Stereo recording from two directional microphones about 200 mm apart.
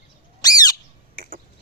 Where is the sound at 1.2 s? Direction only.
45° right (ahead or behind).